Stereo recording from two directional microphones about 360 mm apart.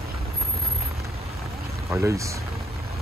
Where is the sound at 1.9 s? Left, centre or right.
Centre.